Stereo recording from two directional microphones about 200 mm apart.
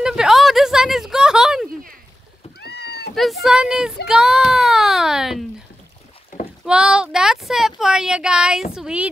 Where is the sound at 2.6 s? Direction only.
55° left (ahead or behind).